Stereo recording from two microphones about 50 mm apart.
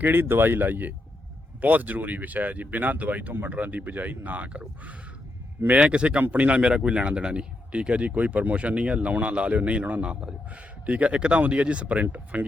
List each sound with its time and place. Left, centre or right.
0.0 s speech: right
5.6 s speech: right